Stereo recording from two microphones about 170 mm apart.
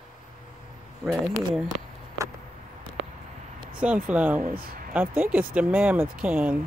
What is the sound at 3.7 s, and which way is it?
Speech, 10° right (ahead or behind).